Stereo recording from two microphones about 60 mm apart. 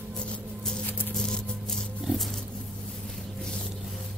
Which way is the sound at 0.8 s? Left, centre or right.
Left.